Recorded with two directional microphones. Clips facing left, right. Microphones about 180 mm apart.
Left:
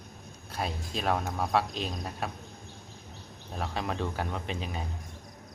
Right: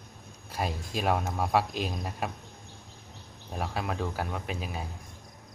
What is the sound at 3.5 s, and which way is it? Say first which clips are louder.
A man's voice: right 1 dB; 10° right (ahead or behind).